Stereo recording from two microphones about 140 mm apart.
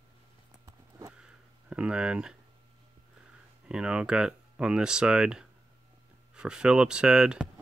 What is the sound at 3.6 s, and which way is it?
Speech, 5° right (ahead or behind).